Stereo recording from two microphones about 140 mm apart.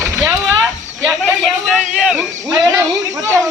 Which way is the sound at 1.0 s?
5° left (ahead or behind).